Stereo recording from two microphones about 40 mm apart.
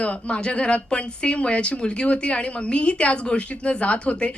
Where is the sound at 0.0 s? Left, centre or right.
Left.